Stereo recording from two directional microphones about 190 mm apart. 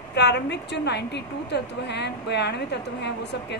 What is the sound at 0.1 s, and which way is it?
A woman's voice, 60° left (ahead or behind).